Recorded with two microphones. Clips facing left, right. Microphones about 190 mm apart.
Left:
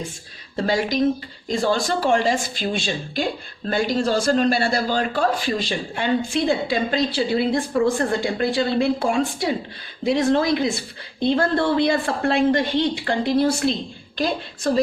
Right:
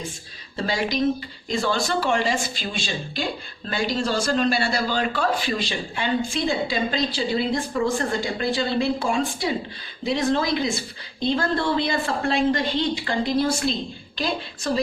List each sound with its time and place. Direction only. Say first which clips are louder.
0.5 s a man's voice: left 3 dB; 45° left (ahead or behind)